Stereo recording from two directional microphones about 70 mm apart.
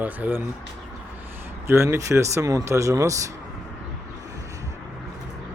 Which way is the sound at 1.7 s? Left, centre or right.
Right.